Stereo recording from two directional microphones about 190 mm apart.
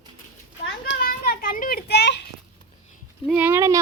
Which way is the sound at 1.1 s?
50° left (ahead or behind).